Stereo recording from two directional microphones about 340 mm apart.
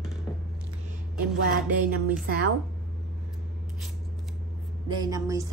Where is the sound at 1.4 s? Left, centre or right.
Right.